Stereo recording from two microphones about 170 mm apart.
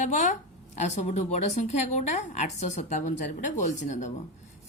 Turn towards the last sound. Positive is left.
turn(degrees=45)  # may be behind; listen again after turning